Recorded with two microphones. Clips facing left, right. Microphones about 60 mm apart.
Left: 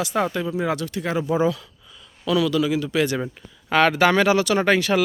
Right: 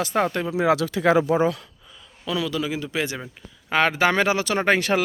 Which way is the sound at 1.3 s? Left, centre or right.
Right.